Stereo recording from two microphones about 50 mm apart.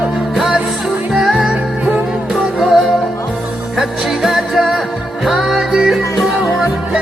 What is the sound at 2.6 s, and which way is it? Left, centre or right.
Music, centre.